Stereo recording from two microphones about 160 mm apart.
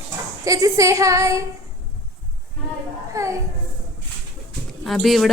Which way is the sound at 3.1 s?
20° right (ahead or behind).